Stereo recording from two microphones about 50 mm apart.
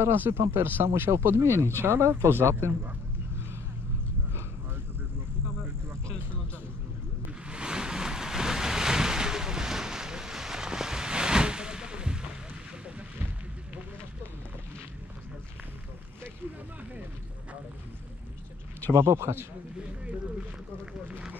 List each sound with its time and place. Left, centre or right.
0.0 s speech: right
1.2 s speech: right
7.4 s waves: centre
18.9 s speech: right